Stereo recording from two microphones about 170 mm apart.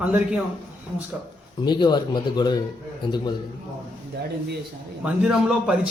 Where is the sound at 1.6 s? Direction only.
25° left (ahead or behind).